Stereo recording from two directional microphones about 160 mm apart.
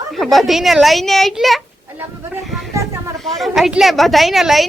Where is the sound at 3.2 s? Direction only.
Centre (ahead or behind).